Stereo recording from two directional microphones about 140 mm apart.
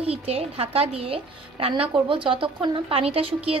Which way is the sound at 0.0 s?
45° right (ahead or behind).